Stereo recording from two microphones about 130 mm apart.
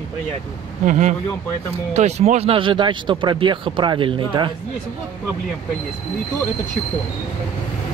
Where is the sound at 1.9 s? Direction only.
60° right (ahead or behind); by 4.5 s 40° right (ahead or behind).